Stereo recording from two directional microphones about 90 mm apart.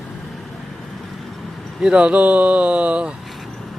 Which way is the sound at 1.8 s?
10° right (ahead or behind).